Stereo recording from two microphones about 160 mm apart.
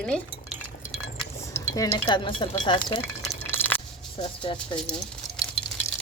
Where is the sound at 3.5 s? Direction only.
10° left (ahead or behind).